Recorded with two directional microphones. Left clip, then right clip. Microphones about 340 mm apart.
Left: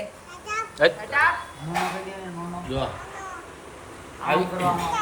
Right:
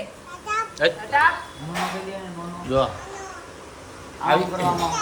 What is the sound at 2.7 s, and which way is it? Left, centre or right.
Speech, centre.